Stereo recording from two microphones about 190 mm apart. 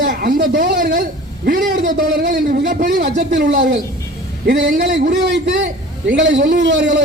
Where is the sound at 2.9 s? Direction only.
65° right (ahead or behind).